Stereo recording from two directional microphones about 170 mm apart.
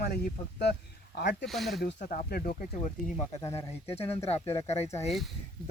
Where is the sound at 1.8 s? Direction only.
50° left (ahead or behind).